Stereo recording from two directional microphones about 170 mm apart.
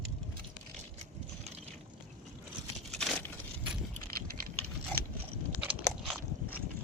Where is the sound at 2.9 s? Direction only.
5° left (ahead or behind).